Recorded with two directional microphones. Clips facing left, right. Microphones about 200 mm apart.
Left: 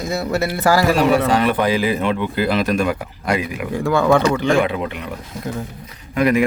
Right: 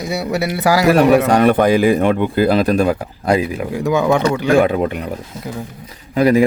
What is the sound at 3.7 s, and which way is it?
Speech, 15° right (ahead or behind).